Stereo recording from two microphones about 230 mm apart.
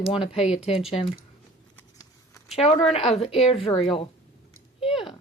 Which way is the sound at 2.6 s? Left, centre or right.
Left.